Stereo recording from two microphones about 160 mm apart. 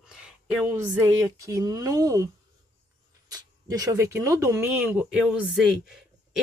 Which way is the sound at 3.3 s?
25° right (ahead or behind).